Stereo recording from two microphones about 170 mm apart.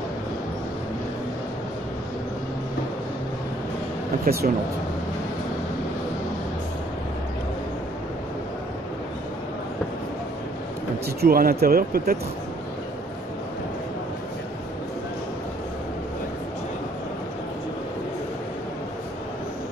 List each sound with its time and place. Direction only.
4.2 s speech: 65° right (ahead or behind)
11.1 s speech: 60° right (ahead or behind)